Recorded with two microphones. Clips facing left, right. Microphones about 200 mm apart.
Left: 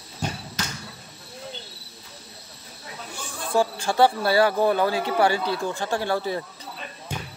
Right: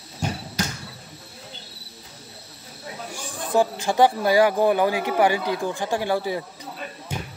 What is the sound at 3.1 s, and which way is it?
Speech, 15° right (ahead or behind).